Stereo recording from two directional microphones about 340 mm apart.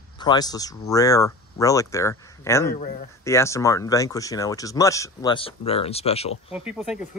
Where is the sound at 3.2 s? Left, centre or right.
Centre.